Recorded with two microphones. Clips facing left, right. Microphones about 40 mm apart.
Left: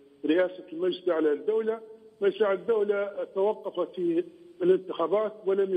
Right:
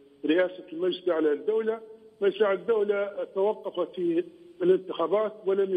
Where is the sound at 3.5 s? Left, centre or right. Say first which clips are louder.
Even; centre.